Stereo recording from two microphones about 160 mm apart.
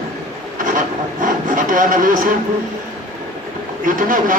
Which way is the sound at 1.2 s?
55° right (ahead or behind).